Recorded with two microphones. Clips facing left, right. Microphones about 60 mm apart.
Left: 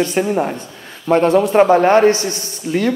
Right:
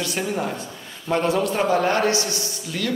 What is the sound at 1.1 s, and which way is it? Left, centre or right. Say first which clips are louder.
A man's voice: left 8 dB; left.